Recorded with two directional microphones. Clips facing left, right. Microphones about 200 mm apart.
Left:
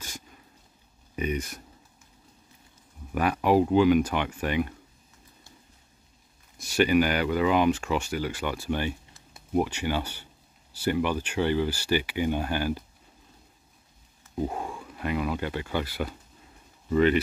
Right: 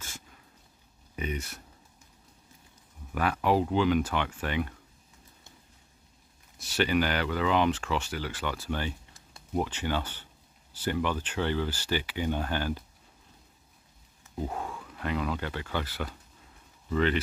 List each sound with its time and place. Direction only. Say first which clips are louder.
1.1 s speech: left 5 dB; 15° left (ahead or behind)
3.2 s speech: left 4 dB; 15° left (ahead or behind)
6.6 s speech: left 5 dB; 10° left (ahead or behind)
14.4 s speech: left 4 dB; 15° left (ahead or behind)